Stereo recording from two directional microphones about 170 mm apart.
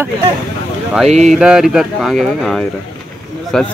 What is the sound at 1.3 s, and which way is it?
Speech, 5° right (ahead or behind).